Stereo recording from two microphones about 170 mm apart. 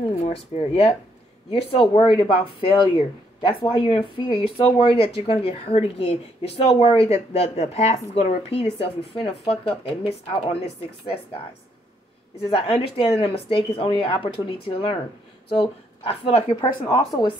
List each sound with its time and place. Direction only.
0.1 s a woman's voice: 40° left (ahead or behind)
12.4 s a woman's voice: 35° left (ahead or behind)
16.8 s speech: 25° left (ahead or behind)